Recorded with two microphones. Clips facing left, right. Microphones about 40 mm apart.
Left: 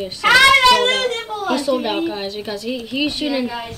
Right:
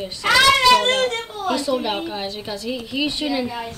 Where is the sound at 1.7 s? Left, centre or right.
Left.